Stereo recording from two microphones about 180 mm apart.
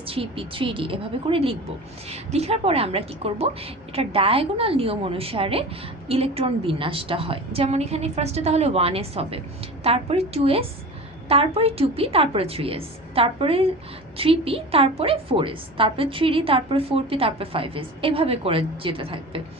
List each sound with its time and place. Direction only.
0.0 s a woman's voice: 30° right (ahead or behind)